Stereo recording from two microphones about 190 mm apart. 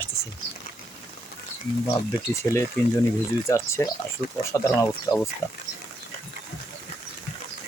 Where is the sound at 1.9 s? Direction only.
15° left (ahead or behind).